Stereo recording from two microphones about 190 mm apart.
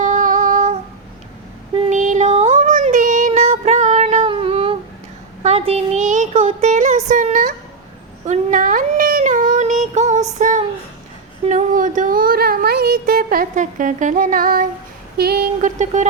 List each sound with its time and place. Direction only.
0.0 s female singing: 40° right (ahead or behind)
1.9 s music: 40° right (ahead or behind)
5.4 s a sound: 35° right (ahead or behind); by 15.7 s 55° right (ahead or behind)